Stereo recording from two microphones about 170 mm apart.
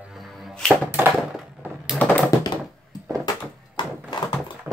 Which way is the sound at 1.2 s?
Centre (ahead or behind).